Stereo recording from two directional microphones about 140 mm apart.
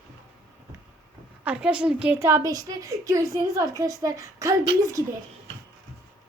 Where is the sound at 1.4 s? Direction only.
5° right (ahead or behind); by 4.5 s 25° right (ahead or behind).